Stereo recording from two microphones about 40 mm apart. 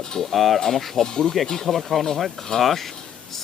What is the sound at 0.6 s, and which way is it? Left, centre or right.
Speech, centre.